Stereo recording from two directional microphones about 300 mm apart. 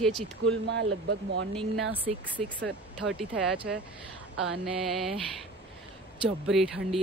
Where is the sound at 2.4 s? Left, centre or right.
Centre.